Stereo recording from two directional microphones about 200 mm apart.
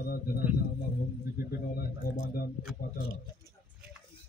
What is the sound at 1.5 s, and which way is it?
Speech, 50° left (ahead or behind).